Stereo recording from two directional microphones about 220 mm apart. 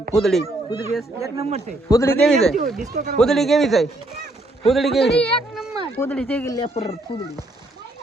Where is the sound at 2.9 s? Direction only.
35° right (ahead or behind).